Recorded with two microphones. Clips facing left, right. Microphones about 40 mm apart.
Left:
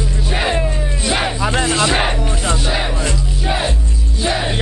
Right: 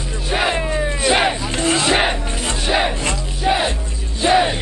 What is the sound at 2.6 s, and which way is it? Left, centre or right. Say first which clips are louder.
Music: right 2 dB; centre.